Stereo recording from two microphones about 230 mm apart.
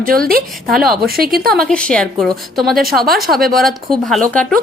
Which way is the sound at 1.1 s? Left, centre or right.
Right.